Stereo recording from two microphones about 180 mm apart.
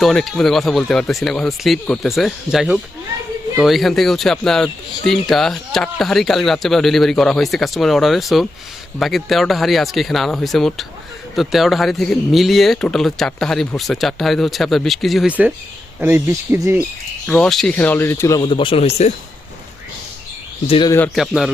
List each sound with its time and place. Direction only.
0.0 s speech: centre (ahead or behind)
17.2 s speech: 5° left (ahead or behind); by 19.1 s 35° left (ahead or behind)
20.7 s speech: 30° left (ahead or behind)
21.2 s speech: centre (ahead or behind)